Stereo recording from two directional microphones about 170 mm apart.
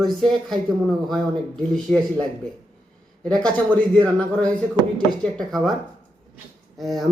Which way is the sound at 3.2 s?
5° left (ahead or behind).